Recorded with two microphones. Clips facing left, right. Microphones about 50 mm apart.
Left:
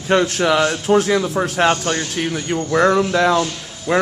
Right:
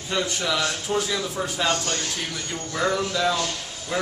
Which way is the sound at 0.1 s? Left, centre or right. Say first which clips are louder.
Left 10 dB; left.